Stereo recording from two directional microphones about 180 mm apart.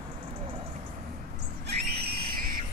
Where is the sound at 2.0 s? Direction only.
60° right (ahead or behind).